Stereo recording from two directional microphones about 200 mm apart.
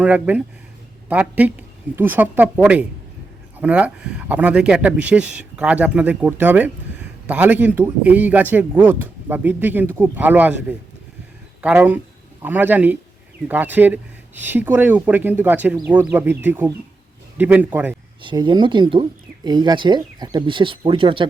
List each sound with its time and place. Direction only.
0.0 s a man's voice: 5° right (ahead or behind)
18.2 s speech: 25° right (ahead or behind)